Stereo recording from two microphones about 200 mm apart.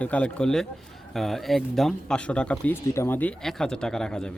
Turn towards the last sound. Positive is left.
turn(degrees=5)  # may be behind; listen again after turning